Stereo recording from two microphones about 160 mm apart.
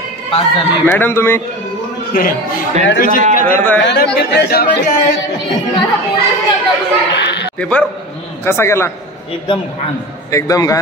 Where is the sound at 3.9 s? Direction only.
75° left (ahead or behind).